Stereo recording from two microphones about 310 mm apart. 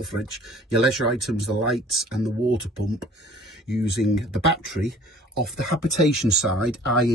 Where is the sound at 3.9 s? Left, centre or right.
Left.